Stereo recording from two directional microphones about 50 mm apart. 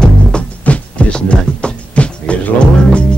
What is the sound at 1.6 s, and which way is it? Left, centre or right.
Music, left.